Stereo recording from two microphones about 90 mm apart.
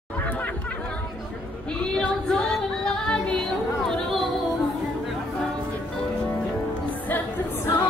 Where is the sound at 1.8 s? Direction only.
10° left (ahead or behind).